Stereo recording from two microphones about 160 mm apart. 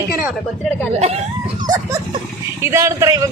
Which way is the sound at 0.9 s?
40° right (ahead or behind).